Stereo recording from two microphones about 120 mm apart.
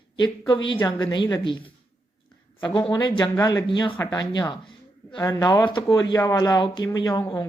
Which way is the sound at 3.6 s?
45° left (ahead or behind).